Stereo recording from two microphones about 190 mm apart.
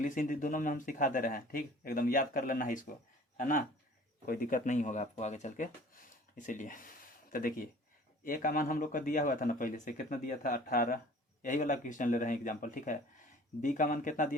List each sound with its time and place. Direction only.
0.0 s speech: 45° left (ahead or behind)